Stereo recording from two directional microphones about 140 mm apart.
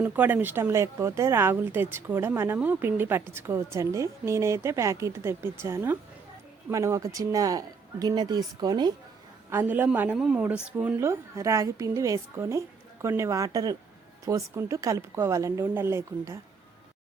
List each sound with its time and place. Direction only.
0.0 s a woman's voice: 15° right (ahead or behind); by 8.9 s 30° right (ahead or behind)
9.5 s a woman's voice: 15° right (ahead or behind)